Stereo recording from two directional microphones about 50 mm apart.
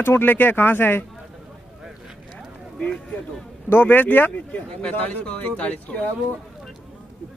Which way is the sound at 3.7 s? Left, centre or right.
Left.